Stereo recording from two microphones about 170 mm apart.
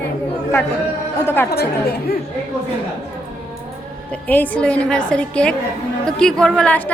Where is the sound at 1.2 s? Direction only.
10° left (ahead or behind).